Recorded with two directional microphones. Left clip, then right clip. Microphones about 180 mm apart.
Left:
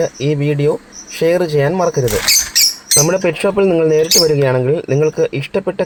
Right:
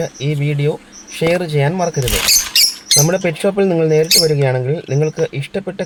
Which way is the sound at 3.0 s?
10° left (ahead or behind).